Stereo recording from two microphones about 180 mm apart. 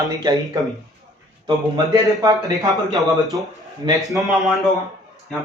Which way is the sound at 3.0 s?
Centre (ahead or behind).